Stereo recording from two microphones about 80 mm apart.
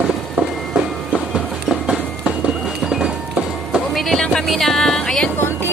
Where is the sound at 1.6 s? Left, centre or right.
Centre.